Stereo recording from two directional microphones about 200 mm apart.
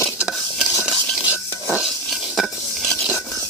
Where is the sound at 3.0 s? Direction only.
5° right (ahead or behind).